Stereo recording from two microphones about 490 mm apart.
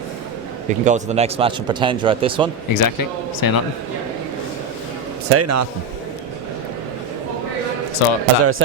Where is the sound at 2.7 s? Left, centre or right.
Left.